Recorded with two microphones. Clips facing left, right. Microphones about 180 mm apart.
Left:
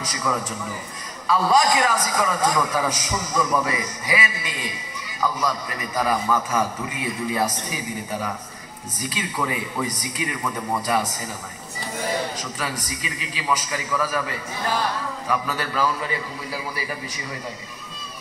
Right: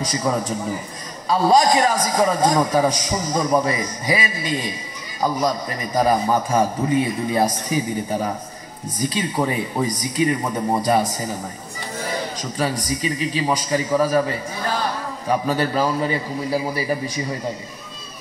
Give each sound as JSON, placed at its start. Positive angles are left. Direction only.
{"t": 0.1, "sound": "a man's voice", "side_deg": -30}
{"t": 12.5, "sound": "a man's voice", "side_deg": -30}